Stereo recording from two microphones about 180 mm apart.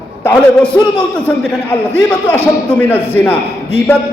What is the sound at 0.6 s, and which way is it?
Speech, 30° left (ahead or behind).